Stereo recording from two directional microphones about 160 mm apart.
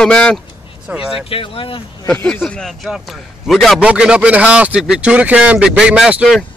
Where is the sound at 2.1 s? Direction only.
10° left (ahead or behind).